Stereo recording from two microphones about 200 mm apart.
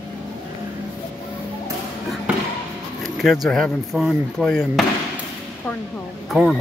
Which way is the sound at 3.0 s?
Centre (ahead or behind).